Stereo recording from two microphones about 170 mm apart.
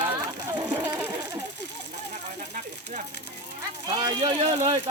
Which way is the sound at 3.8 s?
25° right (ahead or behind).